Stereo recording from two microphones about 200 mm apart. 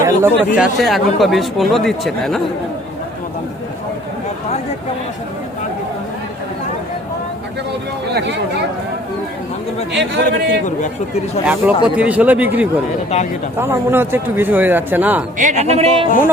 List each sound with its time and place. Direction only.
0.0 s speech: 10° right (ahead or behind)
8.1 s speech: 60° right (ahead or behind)
9.9 s speech: 60° right (ahead or behind)
10.7 s speech: 40° left (ahead or behind)
11.4 s speech: 5° right (ahead or behind)
15.4 s a woman's voice: 35° right (ahead or behind)